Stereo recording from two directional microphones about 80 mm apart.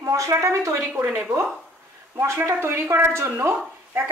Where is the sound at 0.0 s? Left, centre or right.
Right.